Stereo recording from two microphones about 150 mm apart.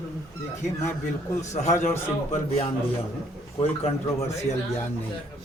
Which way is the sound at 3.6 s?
40° left (ahead or behind).